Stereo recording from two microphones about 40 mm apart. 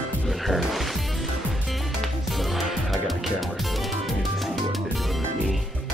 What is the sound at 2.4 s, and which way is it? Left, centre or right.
Music, centre.